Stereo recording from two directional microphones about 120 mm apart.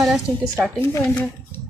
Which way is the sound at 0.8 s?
20° left (ahead or behind).